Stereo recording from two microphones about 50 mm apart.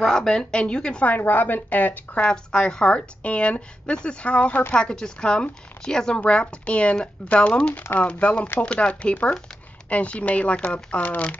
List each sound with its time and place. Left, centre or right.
0.0 s a woman's voice: centre
1.1 s speech: left
2.2 s a woman's voice: centre
6.2 s a woman's voice: left